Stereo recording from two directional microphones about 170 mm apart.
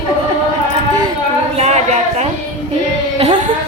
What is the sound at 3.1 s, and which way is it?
Music, 30° right (ahead or behind).